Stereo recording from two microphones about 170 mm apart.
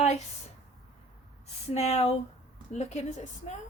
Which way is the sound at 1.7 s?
40° left (ahead or behind).